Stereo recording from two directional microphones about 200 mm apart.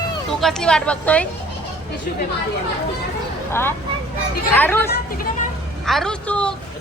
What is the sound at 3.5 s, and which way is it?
Speech, 10° left (ahead or behind).